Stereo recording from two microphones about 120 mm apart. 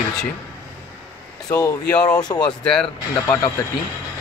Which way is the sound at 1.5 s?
30° left (ahead or behind).